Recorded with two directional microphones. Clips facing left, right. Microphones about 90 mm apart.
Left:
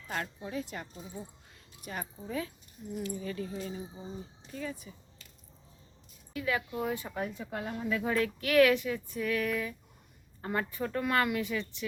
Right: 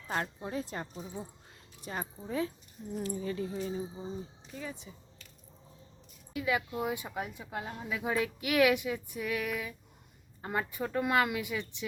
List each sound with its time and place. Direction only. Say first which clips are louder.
0.4 s speech: right 1 dB; 35° right (ahead or behind)
6.3 s speech: right 1 dB; 15° right (ahead or behind)